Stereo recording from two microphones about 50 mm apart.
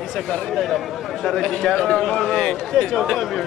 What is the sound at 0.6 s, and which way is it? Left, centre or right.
A man's voice, centre.